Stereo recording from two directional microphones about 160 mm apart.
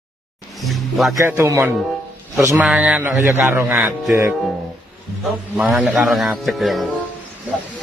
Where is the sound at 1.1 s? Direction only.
20° right (ahead or behind).